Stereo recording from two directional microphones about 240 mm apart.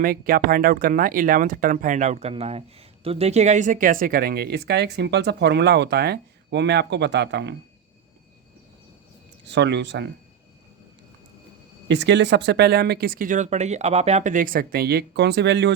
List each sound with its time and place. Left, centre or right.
0.0 s speech: right
9.5 s speech: right
11.9 s speech: right